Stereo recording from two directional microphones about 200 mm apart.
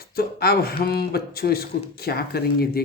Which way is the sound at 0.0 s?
50° left (ahead or behind).